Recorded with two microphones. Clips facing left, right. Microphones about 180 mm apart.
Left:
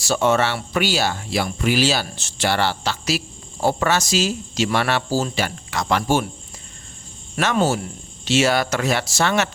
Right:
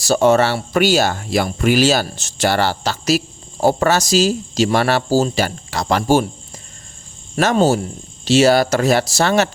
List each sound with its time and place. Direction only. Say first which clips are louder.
0.0 s speech: right 5 dB; 40° right (ahead or behind)
7.3 s speech: right 5 dB; 35° right (ahead or behind)